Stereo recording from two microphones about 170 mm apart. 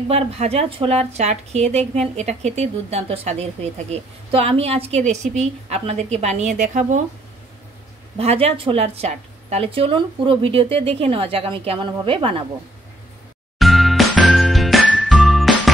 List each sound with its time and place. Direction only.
0.1 s a woman's voice: 35° right (ahead or behind)
8.2 s a woman's voice: 35° right (ahead or behind)
13.6 s music: centre (ahead or behind)